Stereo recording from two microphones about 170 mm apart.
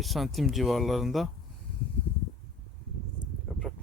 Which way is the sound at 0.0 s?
Centre (ahead or behind).